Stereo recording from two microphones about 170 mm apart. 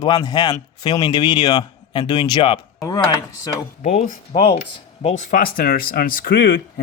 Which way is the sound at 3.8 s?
50° left (ahead or behind).